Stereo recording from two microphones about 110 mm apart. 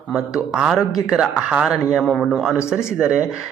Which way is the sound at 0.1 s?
5° right (ahead or behind).